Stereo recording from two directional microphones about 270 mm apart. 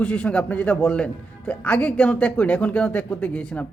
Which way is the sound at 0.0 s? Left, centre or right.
Centre.